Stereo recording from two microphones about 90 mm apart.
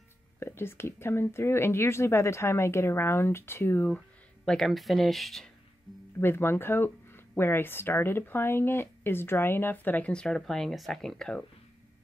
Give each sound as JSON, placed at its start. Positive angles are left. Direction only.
{"t": 0.4, "sound": "speech", "side_deg": 25}
{"t": 4.5, "sound": "speech", "side_deg": 5}
{"t": 6.1, "sound": "speech", "side_deg": 25}